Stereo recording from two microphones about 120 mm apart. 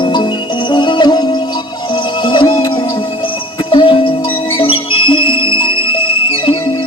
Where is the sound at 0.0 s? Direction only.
40° left (ahead or behind).